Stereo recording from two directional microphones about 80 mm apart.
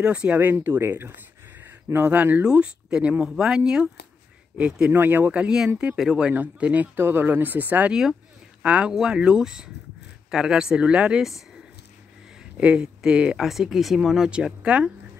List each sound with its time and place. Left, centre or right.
0.0 s speech: centre
4.9 s speech: right
5.3 s speech: centre
12.5 s speech: centre